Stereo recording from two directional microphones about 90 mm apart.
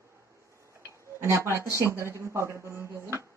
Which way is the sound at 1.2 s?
30° right (ahead or behind).